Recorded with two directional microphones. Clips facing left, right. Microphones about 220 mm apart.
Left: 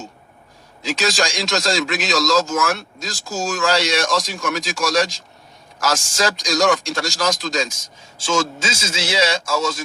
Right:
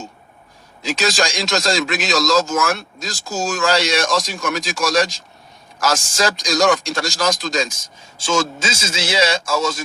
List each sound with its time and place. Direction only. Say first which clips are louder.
0.9 s speech: right 1 dB; 50° right (ahead or behind)